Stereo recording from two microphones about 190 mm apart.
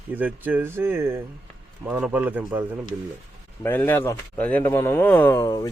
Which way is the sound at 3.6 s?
10° left (ahead or behind).